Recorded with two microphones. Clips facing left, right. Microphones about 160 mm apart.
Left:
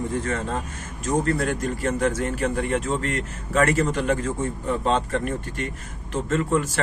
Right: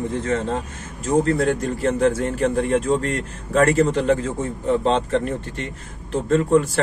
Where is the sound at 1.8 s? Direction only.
30° right (ahead or behind).